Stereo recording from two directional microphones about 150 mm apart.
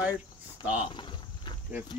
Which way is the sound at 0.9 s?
30° left (ahead or behind).